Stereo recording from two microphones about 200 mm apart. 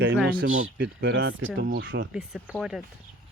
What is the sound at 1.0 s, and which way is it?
Speech, 70° right (ahead or behind).